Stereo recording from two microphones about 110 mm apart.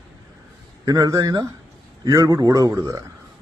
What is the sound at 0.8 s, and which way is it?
Speech, 30° right (ahead or behind).